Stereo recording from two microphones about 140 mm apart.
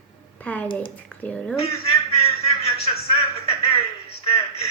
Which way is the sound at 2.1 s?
45° left (ahead or behind).